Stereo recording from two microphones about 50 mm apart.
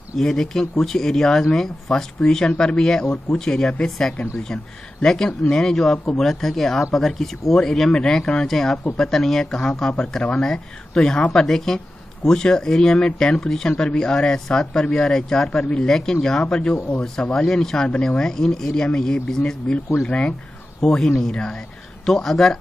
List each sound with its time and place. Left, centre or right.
0.2 s speech: centre
5.0 s speech: centre
15.9 s speech: centre
20.8 s speech: centre